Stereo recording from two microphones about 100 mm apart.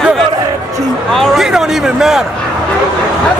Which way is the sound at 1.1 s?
Centre (ahead or behind).